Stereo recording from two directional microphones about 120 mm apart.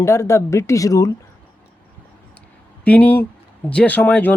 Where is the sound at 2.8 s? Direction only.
15° left (ahead or behind).